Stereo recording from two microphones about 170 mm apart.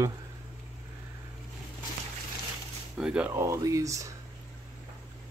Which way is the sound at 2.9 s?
5° right (ahead or behind).